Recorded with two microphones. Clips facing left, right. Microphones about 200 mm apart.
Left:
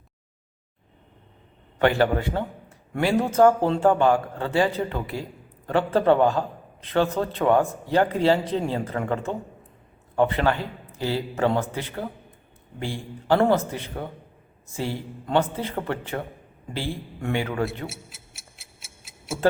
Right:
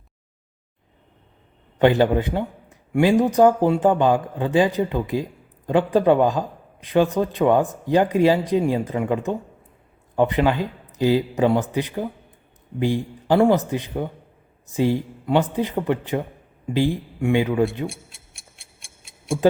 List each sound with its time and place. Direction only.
1.8 s speech: 20° right (ahead or behind)
17.8 s tick-tock: 5° left (ahead or behind)